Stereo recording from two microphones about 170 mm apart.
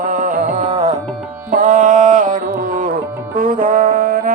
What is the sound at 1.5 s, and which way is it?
Carnatic music, 50° right (ahead or behind).